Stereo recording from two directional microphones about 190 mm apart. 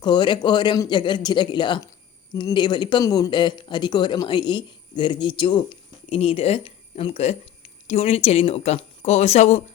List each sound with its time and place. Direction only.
0.0 s speech: 25° left (ahead or behind)